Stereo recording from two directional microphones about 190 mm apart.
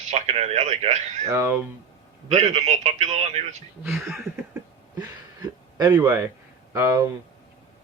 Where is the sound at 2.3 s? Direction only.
35° right (ahead or behind).